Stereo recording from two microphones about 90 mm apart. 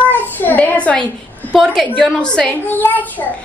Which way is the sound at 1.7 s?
10° left (ahead or behind).